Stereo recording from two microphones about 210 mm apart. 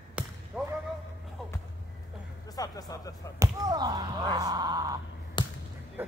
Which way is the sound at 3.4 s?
20° right (ahead or behind).